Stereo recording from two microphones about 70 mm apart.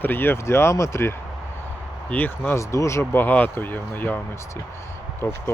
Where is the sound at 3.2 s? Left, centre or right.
Left.